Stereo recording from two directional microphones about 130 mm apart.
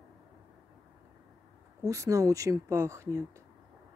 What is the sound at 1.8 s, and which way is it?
Speech, 25° right (ahead or behind).